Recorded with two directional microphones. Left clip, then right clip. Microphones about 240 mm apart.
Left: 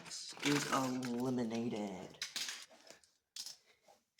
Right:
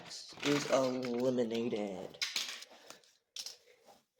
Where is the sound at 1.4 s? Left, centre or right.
Left.